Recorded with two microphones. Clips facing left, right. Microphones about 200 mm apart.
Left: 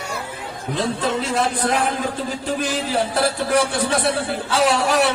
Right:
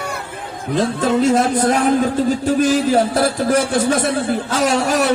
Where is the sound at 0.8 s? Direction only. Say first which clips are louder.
Right 6 dB; 45° right (ahead or behind).